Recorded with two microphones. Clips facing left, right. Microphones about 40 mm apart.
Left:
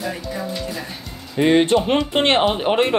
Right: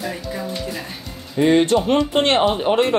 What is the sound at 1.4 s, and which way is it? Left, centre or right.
Speech, left.